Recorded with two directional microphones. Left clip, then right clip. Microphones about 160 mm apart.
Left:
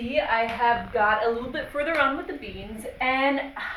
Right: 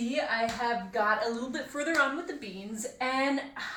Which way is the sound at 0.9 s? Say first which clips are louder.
Left 6 dB; 25° right (ahead or behind).